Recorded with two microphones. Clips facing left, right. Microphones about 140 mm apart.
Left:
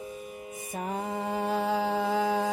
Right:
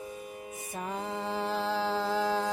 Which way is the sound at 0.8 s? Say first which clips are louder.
Left 3 dB; 50° left (ahead or behind).